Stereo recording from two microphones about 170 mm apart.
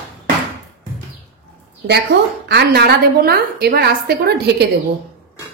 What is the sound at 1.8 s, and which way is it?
A woman's voice, 75° right (ahead or behind).